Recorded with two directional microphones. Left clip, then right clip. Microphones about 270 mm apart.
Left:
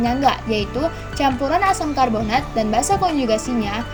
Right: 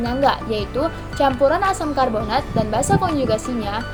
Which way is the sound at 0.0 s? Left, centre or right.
Left.